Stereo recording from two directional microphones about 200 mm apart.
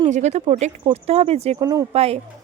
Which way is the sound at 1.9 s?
30° right (ahead or behind).